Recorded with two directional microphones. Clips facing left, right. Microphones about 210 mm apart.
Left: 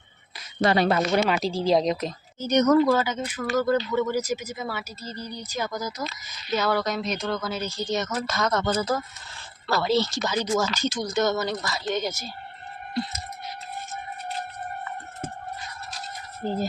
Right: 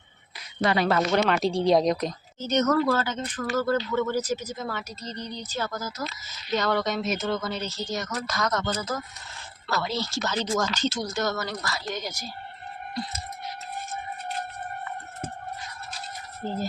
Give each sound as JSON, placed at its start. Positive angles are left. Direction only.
{"t": 0.6, "sound": "speech", "side_deg": 35}
{"t": 0.9, "sound": "speech", "side_deg": 15}
{"t": 1.2, "sound": "speech", "side_deg": 0}
{"t": 2.5, "sound": "speech", "side_deg": 15}